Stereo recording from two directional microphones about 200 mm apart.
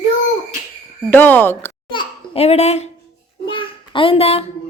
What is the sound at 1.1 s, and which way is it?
Speech, 10° left (ahead or behind).